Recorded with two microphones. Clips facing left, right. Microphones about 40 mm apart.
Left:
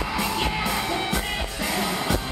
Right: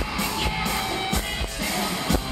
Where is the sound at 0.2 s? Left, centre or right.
Centre.